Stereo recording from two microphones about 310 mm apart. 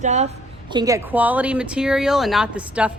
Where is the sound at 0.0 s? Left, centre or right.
Right.